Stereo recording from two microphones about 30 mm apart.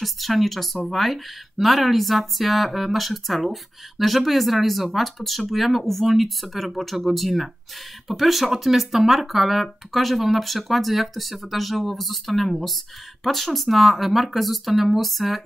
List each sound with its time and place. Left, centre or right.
0.0 s speech: centre